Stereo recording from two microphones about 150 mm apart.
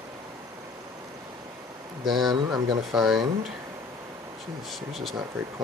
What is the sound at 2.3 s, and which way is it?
Speech, 30° right (ahead or behind).